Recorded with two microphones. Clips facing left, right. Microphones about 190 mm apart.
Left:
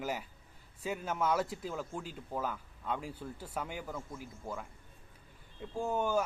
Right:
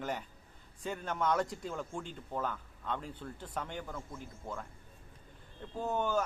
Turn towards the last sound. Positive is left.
turn(degrees=10)  # may be behind; listen again after turning